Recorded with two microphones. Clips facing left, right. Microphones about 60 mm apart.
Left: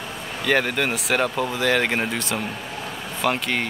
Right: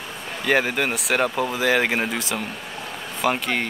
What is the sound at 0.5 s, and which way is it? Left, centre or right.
Speech, centre.